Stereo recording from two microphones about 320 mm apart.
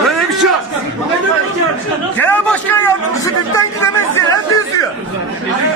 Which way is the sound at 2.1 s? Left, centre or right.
Centre.